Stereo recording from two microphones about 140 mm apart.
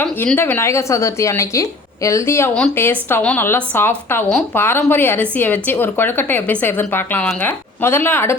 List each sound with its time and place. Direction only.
0.0 s a woman's voice: 15° left (ahead or behind)